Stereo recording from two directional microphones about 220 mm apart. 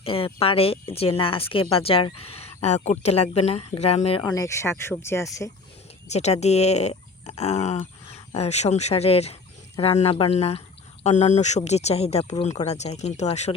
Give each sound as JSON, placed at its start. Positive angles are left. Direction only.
{"t": 0.0, "sound": "speech", "side_deg": 25}
{"t": 6.1, "sound": "speech", "side_deg": 30}